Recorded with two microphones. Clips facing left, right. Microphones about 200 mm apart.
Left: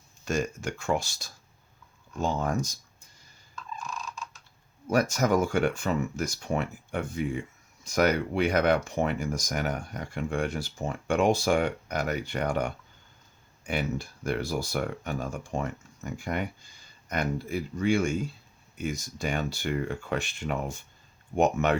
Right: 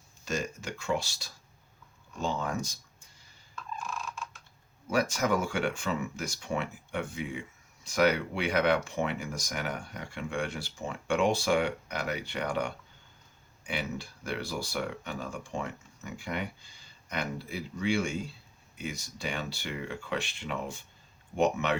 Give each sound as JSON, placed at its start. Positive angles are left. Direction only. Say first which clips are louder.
{"t": 0.3, "sound": "speech", "louder": "left 5 dB", "side_deg": 50}
{"t": 3.8, "sound": "a sound", "louder": "even", "side_deg": -5}
{"t": 4.9, "sound": "speech", "louder": "left 4 dB", "side_deg": 45}